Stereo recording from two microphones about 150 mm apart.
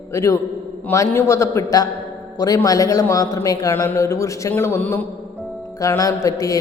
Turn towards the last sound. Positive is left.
turn(degrees=20)  # may be behind; listen again after turning